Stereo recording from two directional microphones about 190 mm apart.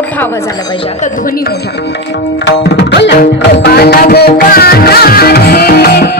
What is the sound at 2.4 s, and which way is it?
Music, 65° left (ahead or behind).